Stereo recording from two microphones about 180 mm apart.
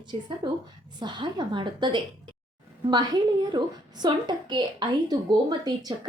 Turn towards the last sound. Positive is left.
turn(degrees=-20)  # may be behind; listen again after turning